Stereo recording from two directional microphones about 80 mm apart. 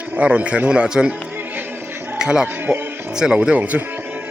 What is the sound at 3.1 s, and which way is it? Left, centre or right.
Speech, centre.